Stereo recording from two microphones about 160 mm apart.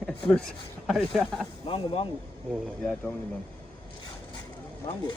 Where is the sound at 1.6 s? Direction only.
35° left (ahead or behind).